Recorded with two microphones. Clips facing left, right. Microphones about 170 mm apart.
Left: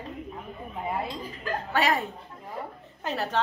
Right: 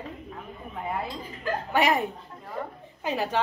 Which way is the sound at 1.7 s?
15° right (ahead or behind).